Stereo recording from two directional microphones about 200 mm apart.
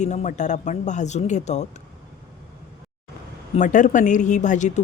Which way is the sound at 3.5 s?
40° left (ahead or behind).